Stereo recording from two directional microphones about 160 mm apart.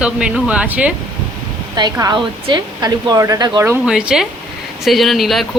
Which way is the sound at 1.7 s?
25° right (ahead or behind).